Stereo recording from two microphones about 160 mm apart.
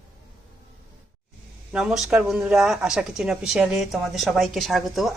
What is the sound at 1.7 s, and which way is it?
Speech, 5° right (ahead or behind).